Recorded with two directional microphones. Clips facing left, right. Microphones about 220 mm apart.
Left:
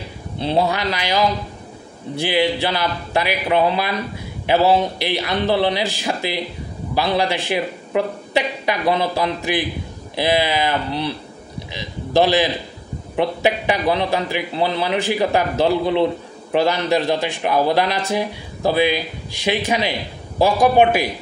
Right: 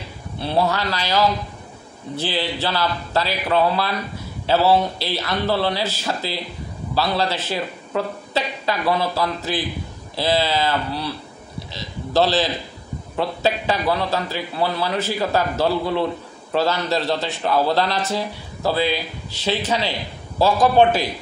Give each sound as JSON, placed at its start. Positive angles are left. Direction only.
{"t": 0.4, "sound": "a man's voice", "side_deg": 20}